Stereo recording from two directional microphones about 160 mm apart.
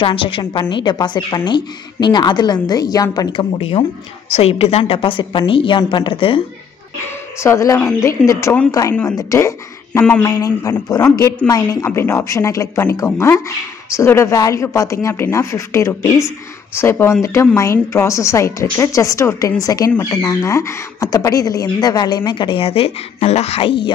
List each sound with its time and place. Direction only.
0.0 s a woman's voice: 35° left (ahead or behind)
7.4 s a woman's voice: 20° left (ahead or behind); by 23.8 s 35° left (ahead or behind)